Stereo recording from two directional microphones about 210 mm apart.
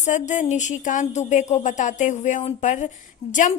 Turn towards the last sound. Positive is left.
turn(degrees=35)  # may be behind; listen again after turning